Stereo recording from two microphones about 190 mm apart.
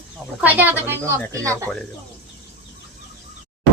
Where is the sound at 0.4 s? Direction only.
10° right (ahead or behind).